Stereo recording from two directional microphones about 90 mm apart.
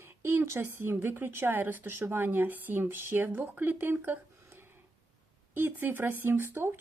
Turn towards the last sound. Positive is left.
turn(degrees=-25)  # may be behind; listen again after turning